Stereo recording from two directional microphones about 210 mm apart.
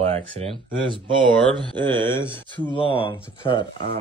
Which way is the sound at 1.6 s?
20° right (ahead or behind).